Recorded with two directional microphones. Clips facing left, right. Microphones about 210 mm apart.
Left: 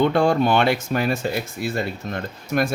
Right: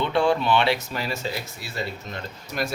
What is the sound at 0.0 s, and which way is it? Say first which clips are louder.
Speech: left 4 dB; 45° left (ahead or behind).